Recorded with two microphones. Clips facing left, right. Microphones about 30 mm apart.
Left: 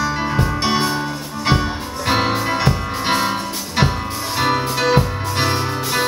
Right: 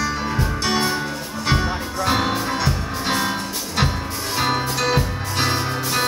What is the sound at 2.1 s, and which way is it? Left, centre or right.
Music, left.